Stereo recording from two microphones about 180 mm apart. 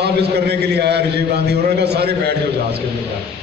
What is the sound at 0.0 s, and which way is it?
A man's voice, 65° right (ahead or behind).